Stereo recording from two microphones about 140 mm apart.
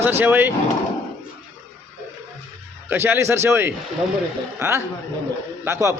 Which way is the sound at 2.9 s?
15° right (ahead or behind).